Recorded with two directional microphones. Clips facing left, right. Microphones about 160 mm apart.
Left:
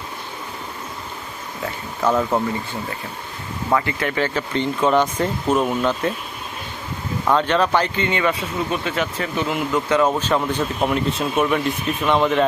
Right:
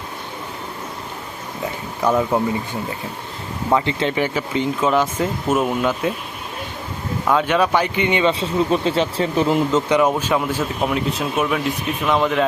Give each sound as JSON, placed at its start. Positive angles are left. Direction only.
{"t": 2.0, "sound": "speech", "side_deg": -10}
{"t": 3.7, "sound": "speech", "side_deg": -20}
{"t": 7.3, "sound": "speech", "side_deg": -5}
{"t": 9.7, "sound": "speech", "side_deg": -15}